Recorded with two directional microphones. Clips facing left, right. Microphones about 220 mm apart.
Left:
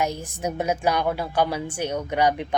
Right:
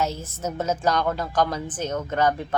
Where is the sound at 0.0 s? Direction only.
15° left (ahead or behind).